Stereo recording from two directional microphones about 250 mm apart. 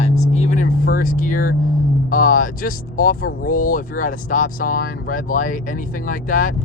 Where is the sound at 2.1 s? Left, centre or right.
Left.